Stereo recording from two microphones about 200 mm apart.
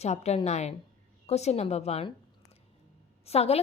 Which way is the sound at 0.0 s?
35° left (ahead or behind).